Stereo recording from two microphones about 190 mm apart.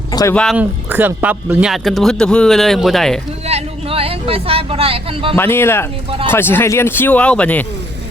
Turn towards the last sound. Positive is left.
turn(degrees=5)  # may be behind; listen again after turning